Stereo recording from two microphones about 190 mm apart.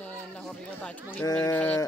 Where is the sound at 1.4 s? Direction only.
10° left (ahead or behind).